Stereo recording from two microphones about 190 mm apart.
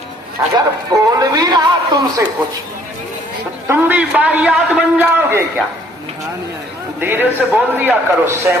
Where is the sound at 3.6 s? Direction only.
10° right (ahead or behind).